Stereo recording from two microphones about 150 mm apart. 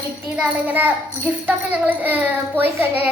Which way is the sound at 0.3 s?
10° right (ahead or behind).